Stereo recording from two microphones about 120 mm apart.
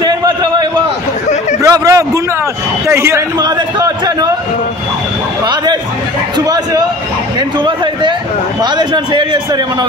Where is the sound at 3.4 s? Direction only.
35° right (ahead or behind).